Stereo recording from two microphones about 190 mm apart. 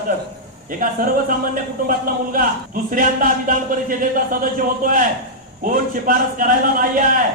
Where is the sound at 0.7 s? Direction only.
45° right (ahead or behind).